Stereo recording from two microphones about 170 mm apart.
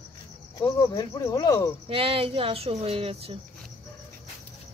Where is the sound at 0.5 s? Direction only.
20° left (ahead or behind).